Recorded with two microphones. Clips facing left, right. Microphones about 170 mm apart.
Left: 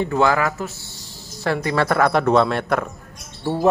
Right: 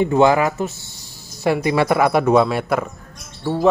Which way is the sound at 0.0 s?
20° right (ahead or behind).